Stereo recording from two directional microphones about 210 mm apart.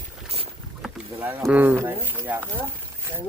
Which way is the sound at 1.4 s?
10° right (ahead or behind).